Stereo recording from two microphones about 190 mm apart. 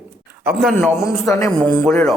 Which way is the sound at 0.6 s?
Centre (ahead or behind).